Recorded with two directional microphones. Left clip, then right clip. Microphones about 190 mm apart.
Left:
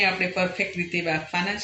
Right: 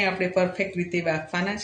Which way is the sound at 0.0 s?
25° right (ahead or behind).